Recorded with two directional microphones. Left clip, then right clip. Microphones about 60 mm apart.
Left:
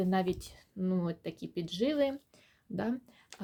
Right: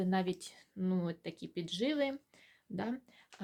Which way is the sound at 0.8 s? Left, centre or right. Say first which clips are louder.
Left 3 dB; left.